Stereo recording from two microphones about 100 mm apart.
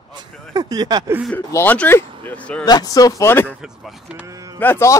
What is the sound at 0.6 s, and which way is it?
Speech, 40° right (ahead or behind).